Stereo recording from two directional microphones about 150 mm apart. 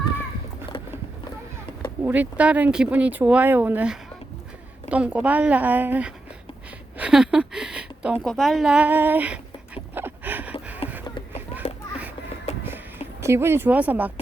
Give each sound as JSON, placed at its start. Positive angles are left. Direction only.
{"t": 2.0, "sound": "speech", "side_deg": -10}
{"t": 6.9, "sound": "a sound", "side_deg": -5}
{"t": 8.2, "sound": "dog", "side_deg": 0}
{"t": 10.8, "sound": "a sound", "side_deg": 40}
{"t": 12.5, "sound": "music", "side_deg": 45}
{"t": 13.2, "sound": "speech", "side_deg": -15}